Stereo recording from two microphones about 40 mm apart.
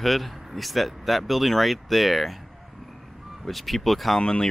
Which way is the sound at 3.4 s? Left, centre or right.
Centre.